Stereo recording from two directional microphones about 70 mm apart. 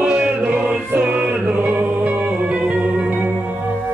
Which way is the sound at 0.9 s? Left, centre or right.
Centre.